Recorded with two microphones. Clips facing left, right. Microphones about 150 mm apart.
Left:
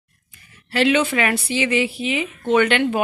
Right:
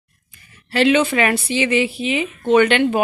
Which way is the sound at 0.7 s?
25° right (ahead or behind).